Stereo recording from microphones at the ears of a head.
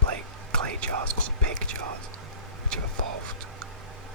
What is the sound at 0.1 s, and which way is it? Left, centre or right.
Whispering, right.